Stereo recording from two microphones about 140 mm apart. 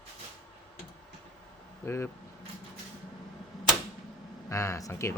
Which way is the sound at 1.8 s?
20° left (ahead or behind).